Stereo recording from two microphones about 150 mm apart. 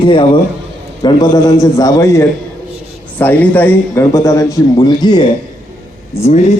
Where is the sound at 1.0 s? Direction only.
25° left (ahead or behind).